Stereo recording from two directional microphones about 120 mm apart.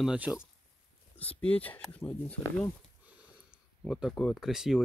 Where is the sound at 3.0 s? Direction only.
10° right (ahead or behind).